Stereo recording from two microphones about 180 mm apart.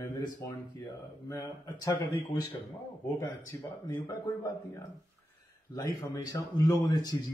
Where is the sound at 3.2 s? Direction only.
20° left (ahead or behind).